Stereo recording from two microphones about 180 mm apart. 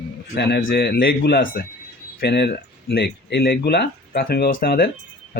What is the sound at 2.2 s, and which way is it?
Speech, 70° left (ahead or behind).